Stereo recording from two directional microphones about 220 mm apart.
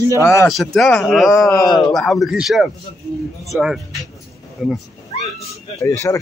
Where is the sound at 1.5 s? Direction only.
15° left (ahead or behind).